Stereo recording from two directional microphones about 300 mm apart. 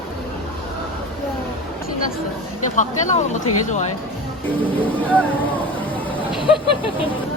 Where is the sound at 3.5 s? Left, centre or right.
Left.